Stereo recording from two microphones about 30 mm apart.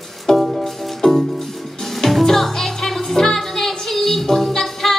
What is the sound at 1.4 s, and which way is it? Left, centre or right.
Music, centre.